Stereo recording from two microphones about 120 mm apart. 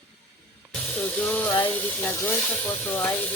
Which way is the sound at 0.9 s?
10° left (ahead or behind).